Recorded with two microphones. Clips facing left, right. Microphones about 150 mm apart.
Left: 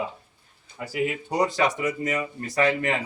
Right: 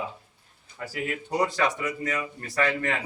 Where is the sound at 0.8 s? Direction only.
15° left (ahead or behind).